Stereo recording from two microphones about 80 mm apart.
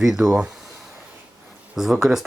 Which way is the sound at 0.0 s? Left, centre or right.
Centre.